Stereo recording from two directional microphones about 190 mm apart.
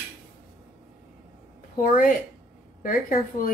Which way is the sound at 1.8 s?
45° left (ahead or behind).